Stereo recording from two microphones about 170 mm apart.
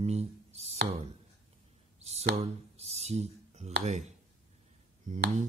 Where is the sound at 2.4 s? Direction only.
40° right (ahead or behind).